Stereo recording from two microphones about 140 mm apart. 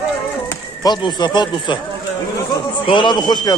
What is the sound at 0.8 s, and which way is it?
Speech, 30° left (ahead or behind).